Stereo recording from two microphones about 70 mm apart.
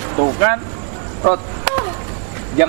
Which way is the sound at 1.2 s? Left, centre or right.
Centre.